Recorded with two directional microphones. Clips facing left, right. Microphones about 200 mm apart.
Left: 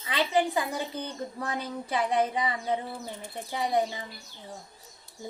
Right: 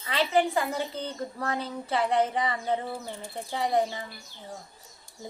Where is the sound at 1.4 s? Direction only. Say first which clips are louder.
Right 2 dB; 15° left (ahead or behind).